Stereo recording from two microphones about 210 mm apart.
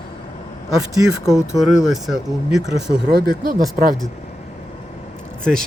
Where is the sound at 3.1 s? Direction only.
45° right (ahead or behind).